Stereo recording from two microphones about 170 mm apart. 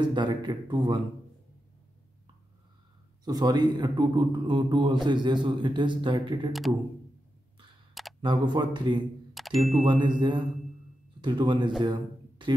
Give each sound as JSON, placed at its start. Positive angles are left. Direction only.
{"t": 0.0, "sound": "a man's voice", "side_deg": -25}
{"t": 3.3, "sound": "a man's voice", "side_deg": -25}
{"t": 8.2, "sound": "a man's voice", "side_deg": -25}
{"t": 9.3, "sound": "a sound", "side_deg": 0}
{"t": 9.8, "sound": "a man's voice", "side_deg": -25}
{"t": 11.8, "sound": "a sound", "side_deg": -25}